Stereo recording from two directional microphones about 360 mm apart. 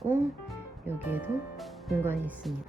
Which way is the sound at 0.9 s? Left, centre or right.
Centre.